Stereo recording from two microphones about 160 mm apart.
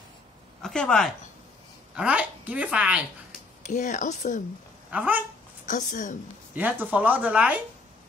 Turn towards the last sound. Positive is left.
turn(degrees=-10)  # may be behind; listen again after turning